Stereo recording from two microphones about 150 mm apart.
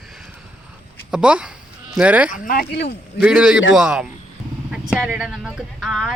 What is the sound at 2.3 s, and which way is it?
Speech, 70° left (ahead or behind).